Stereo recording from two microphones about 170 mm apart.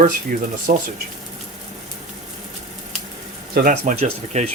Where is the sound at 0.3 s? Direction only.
50° right (ahead or behind).